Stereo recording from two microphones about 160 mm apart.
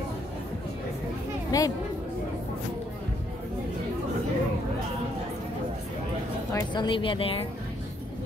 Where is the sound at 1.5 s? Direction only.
20° left (ahead or behind).